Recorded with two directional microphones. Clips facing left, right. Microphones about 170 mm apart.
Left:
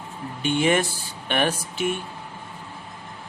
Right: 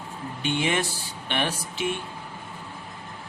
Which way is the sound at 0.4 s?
50° left (ahead or behind).